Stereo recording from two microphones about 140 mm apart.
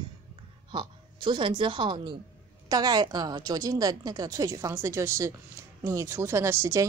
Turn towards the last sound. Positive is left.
turn(degrees=-20)  # may be behind; listen again after turning